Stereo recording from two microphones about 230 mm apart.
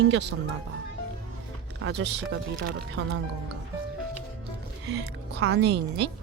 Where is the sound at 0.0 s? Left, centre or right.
Right.